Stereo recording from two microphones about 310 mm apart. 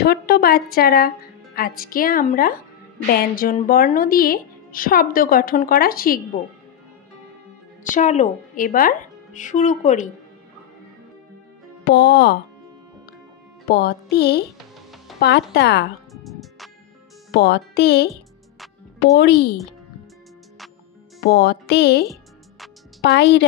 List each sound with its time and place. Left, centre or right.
0.0 s a woman's voice: left
7.9 s a woman's voice: left
11.8 s speech: left
13.7 s music: left
14.1 s speech: left
16.1 s music: centre
17.3 s speech: left
19.1 s speech: left
21.2 s speech: left
23.0 s speech: left